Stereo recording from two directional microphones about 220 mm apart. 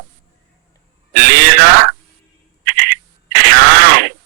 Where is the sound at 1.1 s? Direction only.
45° right (ahead or behind).